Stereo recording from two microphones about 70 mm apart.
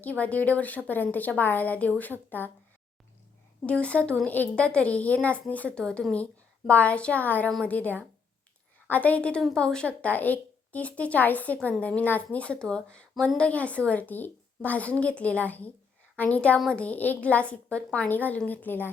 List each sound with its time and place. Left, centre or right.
0.0 s a woman's voice: left
3.7 s a woman's voice: centre